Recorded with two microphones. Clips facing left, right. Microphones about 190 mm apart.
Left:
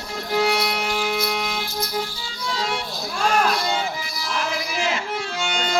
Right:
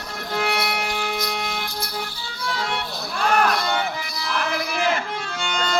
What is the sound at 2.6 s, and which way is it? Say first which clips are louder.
Speech: left 3 dB; 60° right (ahead or behind).